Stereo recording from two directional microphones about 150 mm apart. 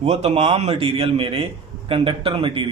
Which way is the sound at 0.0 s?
45° right (ahead or behind).